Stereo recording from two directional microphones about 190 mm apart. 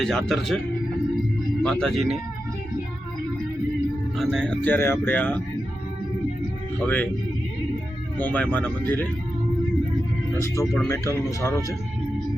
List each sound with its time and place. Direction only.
0.0 s speech: centre (ahead or behind)
1.6 s speech: centre (ahead or behind)
4.2 s speech: centre (ahead or behind)
6.8 s speech: 10° left (ahead or behind)
8.2 s speech: 10° left (ahead or behind)
10.4 s speech: 15° left (ahead or behind)